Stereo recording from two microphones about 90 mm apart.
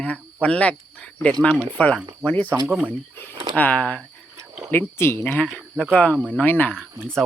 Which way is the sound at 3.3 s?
50° right (ahead or behind).